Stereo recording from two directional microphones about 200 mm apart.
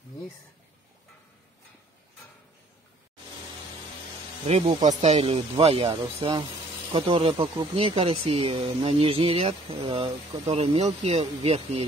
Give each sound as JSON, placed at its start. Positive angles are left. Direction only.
{"t": 4.5, "sound": "speech", "side_deg": -30}